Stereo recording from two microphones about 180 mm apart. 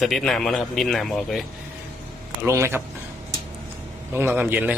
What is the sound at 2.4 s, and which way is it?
Speech, 15° right (ahead or behind).